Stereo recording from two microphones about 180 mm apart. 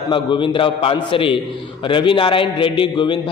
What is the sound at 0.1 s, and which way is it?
A man's voice, 25° left (ahead or behind).